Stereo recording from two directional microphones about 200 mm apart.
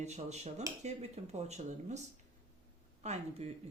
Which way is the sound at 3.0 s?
35° right (ahead or behind).